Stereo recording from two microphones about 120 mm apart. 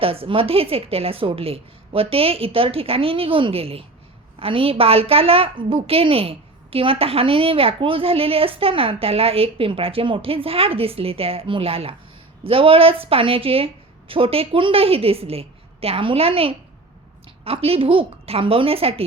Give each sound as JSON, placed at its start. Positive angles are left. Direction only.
{"t": 0.0, "sound": "a woman's voice", "side_deg": -50}